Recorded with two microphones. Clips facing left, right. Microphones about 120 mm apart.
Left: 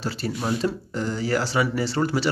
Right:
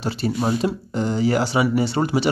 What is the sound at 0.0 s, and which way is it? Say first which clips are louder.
Speech: right 5 dB; 20° right (ahead or behind).